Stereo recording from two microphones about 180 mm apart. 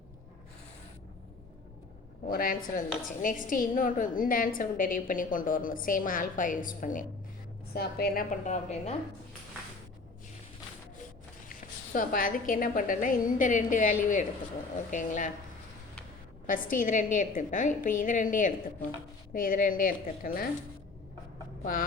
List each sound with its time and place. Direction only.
2.3 s a woman's voice: 55° left (ahead or behind)
7.7 s a woman's voice: 60° left (ahead or behind)
8.4 s a woman's voice: 35° left (ahead or behind)
11.9 s a woman's voice: 50° left (ahead or behind)
16.5 s a woman's voice: 50° left (ahead or behind)
21.6 s speech: 50° left (ahead or behind)